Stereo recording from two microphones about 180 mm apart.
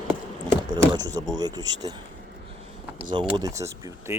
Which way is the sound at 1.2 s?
20° right (ahead or behind).